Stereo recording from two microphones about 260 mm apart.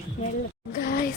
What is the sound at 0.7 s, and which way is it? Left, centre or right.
Speech, left.